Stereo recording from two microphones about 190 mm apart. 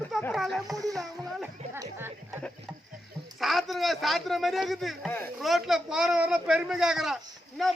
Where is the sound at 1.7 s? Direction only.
20° right (ahead or behind).